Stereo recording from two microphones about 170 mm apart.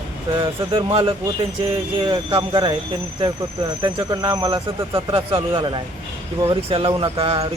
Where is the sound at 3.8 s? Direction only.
25° right (ahead or behind).